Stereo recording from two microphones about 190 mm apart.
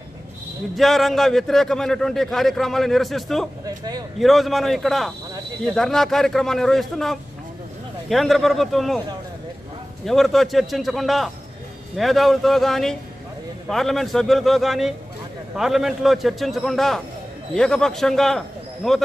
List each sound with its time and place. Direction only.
0.7 s a man's voice: centre (ahead or behind)
3.6 s speech: 20° right (ahead or behind)
4.2 s a man's voice: centre (ahead or behind)
10.0 s a man's voice: centre (ahead or behind)